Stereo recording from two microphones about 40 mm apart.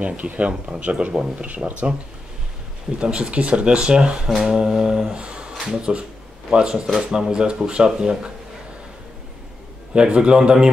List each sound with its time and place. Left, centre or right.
0.0 s speech: right
3.0 s speech: right
4.4 s mantra: centre
5.1 s a sound: right
5.6 s speech: right
9.9 s speech: right